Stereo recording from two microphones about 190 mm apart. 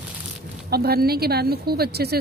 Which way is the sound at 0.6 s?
55° right (ahead or behind).